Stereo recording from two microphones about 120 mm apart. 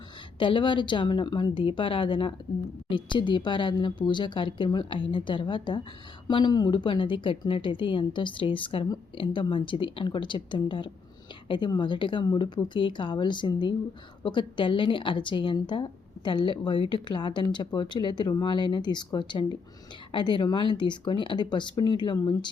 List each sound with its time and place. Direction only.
0.3 s a woman's voice: 45° left (ahead or behind)